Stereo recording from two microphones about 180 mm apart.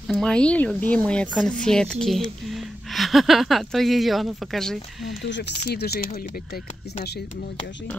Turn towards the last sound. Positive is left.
turn(degrees=65)  # may be behind; listen again after turning